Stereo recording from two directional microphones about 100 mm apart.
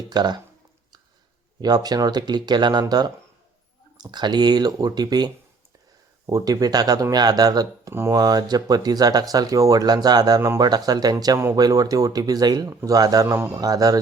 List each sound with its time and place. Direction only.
0.1 s speech: 45° right (ahead or behind)
1.6 s speech: 40° right (ahead or behind)
13.3 s speech: 25° right (ahead or behind)
13.6 s speech: 40° right (ahead or behind)